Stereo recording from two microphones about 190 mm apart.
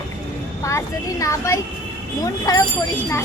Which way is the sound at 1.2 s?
15° left (ahead or behind).